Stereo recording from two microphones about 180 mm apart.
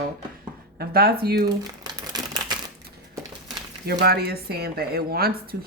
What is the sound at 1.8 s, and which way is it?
Typewriter, 20° right (ahead or behind).